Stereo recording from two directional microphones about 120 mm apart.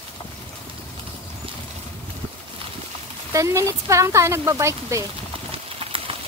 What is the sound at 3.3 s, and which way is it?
Speech, 25° right (ahead or behind).